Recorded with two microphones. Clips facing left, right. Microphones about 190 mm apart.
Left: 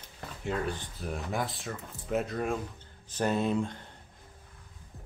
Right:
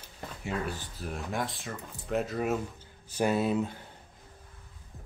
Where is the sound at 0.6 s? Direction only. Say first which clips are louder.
Left 2 dB; centre (ahead or behind).